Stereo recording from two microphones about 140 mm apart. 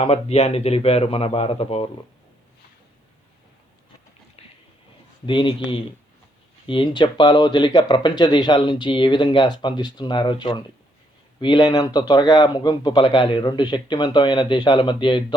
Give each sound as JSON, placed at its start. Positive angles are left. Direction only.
{"t": 0.0, "sound": "speech", "side_deg": 45}
{"t": 4.4, "sound": "train", "side_deg": 45}
{"t": 5.2, "sound": "speech", "side_deg": 35}